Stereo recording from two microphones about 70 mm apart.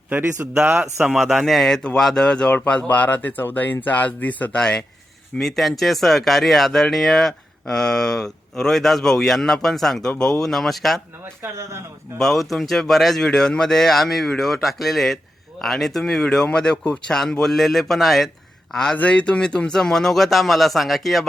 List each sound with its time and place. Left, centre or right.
0.6 s speech: right
1.1 s speech: centre; by 4.6 s left
5.4 s speech: centre
11.4 s speech: right
12.2 s speech: centre